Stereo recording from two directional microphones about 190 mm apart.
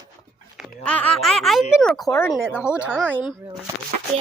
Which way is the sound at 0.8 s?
5° left (ahead or behind).